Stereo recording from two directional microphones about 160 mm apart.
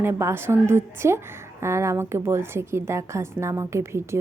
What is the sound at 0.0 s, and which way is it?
A woman's voice, 15° right (ahead or behind).